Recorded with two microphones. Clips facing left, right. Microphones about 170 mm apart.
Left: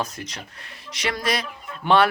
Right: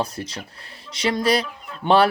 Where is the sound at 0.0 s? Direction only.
30° right (ahead or behind).